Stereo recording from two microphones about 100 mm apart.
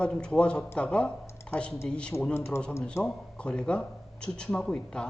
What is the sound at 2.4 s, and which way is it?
Speech, 25° left (ahead or behind).